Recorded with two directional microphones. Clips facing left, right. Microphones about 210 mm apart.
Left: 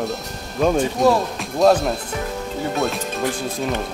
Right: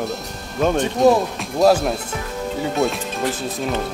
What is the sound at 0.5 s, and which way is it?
A man's voice, centre (ahead or behind).